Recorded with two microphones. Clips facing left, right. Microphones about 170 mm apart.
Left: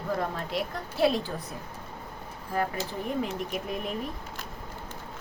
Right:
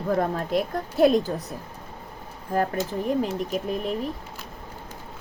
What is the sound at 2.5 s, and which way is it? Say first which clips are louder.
Speech: right 5 dB; 45° right (ahead or behind).